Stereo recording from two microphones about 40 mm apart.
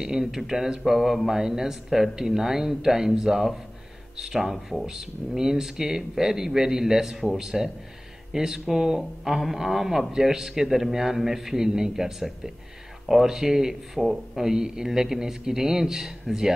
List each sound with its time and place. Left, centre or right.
0.0 s speech: centre